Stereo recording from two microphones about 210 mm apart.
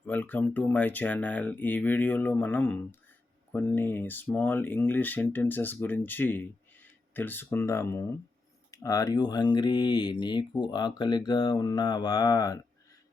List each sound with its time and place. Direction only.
0.0 s speech: 5° left (ahead or behind)